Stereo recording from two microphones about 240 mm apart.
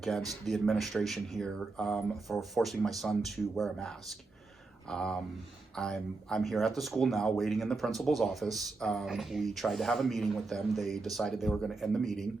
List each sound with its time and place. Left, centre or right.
0.4 s speech: centre